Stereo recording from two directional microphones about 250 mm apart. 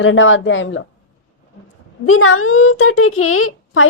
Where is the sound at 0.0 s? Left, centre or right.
Left.